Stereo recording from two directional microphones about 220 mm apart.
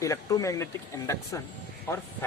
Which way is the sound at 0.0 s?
15° left (ahead or behind).